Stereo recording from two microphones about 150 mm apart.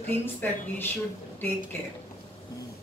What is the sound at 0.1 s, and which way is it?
Speech, 15° left (ahead or behind).